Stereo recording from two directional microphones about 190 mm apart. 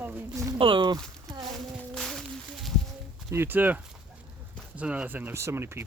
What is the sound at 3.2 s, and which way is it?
Speech, 10° right (ahead or behind).